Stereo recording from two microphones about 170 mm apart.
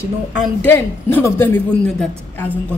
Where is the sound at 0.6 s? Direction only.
10° left (ahead or behind).